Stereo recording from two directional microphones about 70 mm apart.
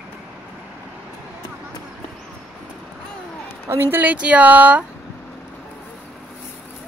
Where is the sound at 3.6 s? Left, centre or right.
Right.